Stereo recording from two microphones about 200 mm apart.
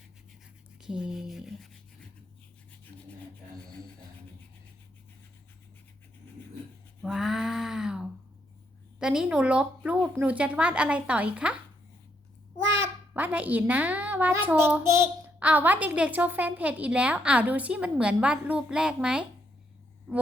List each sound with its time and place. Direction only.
0.8 s speech: 5° right (ahead or behind)
7.0 s a sound: centre (ahead or behind)
9.0 s a woman's voice: 5° right (ahead or behind)
12.5 s babbling: 60° right (ahead or behind)
12.8 s a woman's voice: 10° right (ahead or behind)